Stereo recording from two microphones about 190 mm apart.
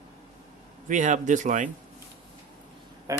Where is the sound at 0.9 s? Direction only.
40° right (ahead or behind).